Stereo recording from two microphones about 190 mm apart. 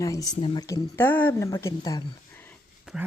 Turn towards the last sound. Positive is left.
turn(degrees=0)  # may be behind; listen again after turning